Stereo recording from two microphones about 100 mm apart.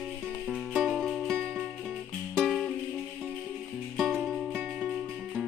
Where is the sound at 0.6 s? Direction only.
Centre (ahead or behind).